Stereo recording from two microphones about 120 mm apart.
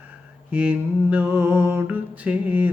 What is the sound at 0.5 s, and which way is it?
Mantra, 10° right (ahead or behind).